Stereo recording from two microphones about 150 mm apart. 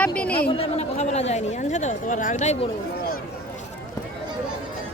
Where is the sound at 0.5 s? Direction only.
45° left (ahead or behind).